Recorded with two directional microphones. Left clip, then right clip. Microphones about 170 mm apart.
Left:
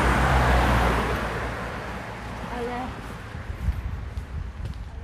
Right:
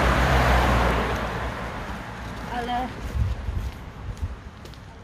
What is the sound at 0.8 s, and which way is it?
Vehicle, 50° left (ahead or behind).